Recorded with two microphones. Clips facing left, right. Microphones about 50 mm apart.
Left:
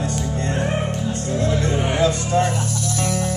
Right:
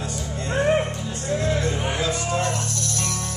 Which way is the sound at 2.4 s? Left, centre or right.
Centre.